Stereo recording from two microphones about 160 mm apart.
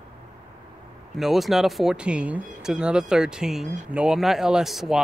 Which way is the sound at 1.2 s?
Centre (ahead or behind).